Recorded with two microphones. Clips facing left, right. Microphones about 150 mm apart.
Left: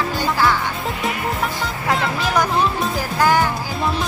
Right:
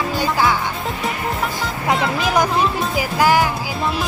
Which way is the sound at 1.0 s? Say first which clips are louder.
Even; centre (ahead or behind).